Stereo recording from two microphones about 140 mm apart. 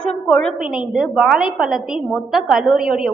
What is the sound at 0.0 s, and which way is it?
A woman's voice, 5° left (ahead or behind).